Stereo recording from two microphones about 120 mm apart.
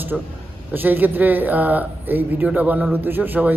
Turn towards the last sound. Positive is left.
turn(degrees=-15)  # may be behind; listen again after turning